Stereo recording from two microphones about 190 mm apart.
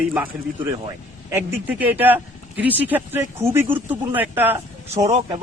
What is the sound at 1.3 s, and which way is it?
Speech, 10° right (ahead or behind).